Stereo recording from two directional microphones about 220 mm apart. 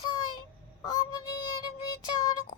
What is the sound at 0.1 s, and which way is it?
Child singing, 20° left (ahead or behind).